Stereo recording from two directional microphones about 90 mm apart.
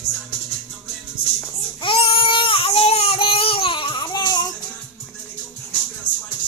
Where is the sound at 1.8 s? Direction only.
90° left; by 4.2 s 60° left (ahead or behind).